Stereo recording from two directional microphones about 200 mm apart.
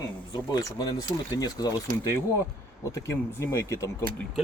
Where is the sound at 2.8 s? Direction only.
15° left (ahead or behind).